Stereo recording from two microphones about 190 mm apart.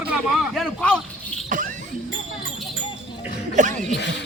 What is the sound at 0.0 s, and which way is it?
Speech, 5° right (ahead or behind).